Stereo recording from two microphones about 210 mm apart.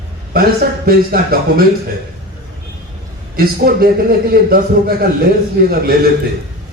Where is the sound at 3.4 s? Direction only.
45° right (ahead or behind).